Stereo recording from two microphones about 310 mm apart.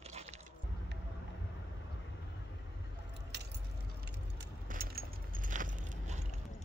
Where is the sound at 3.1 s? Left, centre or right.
Right.